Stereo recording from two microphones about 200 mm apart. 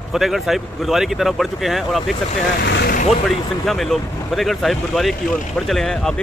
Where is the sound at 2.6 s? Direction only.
55° left (ahead or behind).